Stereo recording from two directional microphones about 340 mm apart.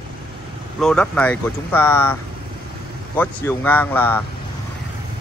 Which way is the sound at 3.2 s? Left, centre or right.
Centre.